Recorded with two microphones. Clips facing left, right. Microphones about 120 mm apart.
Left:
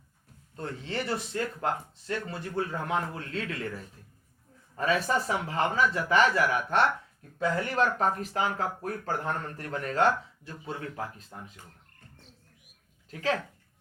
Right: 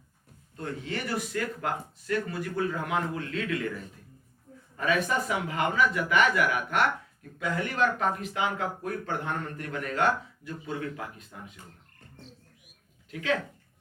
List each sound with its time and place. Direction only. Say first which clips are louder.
0.5 s speech: even; 30° left (ahead or behind)
4.8 s speech: even; 35° left (ahead or behind)
13.1 s speech: right 1 dB; 35° left (ahead or behind)